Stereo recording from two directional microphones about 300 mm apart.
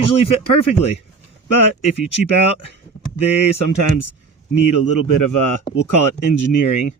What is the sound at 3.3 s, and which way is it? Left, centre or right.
A man's voice, left.